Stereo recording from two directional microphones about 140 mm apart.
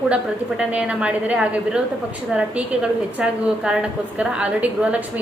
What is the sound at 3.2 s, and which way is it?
A woman's voice, 5° right (ahead or behind).